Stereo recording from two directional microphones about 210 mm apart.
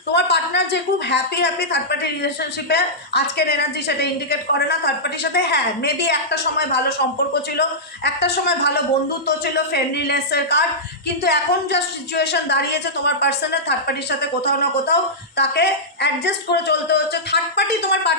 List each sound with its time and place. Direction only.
0.1 s a woman's voice: 55° left (ahead or behind)